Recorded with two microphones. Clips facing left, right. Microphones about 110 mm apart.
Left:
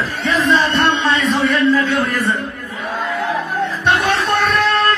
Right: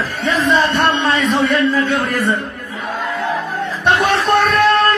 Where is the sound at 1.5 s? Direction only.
50° right (ahead or behind).